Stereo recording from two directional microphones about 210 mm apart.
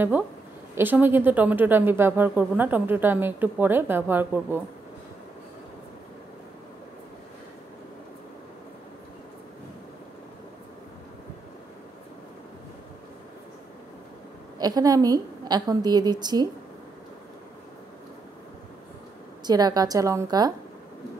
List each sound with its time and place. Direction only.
0.7 s speech: 10° right (ahead or behind)
14.6 s a woman's voice: 20° right (ahead or behind)
19.4 s speech: 20° right (ahead or behind)